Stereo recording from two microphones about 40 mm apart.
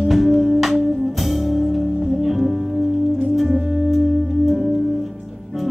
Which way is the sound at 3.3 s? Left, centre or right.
Centre.